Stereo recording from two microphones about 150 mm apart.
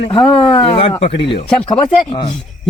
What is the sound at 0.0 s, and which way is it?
Speech, 35° left (ahead or behind).